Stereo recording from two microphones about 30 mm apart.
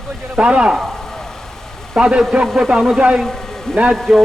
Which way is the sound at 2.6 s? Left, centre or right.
Centre.